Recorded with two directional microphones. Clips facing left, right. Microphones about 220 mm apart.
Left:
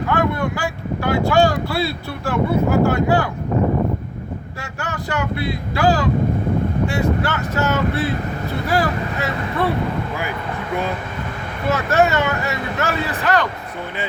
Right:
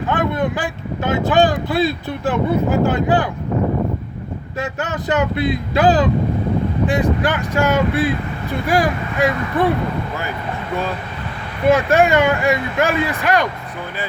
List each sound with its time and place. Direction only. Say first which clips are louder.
0.1 s speech: right 1 dB; 20° right (ahead or behind)
4.6 s speech: right 7 dB; 20° right (ahead or behind)
11.7 s speech: right 3 dB; 15° right (ahead or behind)